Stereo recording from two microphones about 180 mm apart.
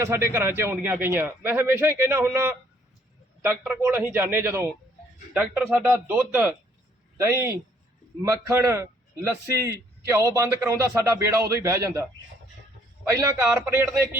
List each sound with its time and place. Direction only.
0.0 s a man's voice: 15° right (ahead or behind)
13.1 s a man's voice: 15° right (ahead or behind)